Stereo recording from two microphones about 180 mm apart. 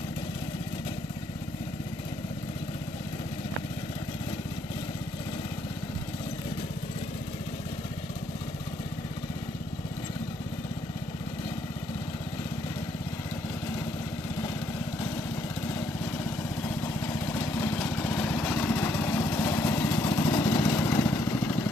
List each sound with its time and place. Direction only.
16.3 s vehicle: 10° left (ahead or behind)